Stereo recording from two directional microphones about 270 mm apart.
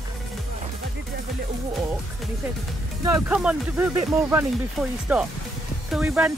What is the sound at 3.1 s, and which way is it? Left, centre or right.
Speech, centre.